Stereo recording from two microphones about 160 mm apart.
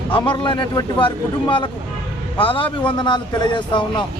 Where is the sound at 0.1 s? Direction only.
30° left (ahead or behind).